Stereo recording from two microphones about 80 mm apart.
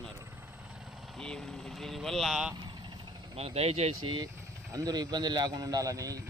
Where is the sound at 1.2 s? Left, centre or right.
Centre.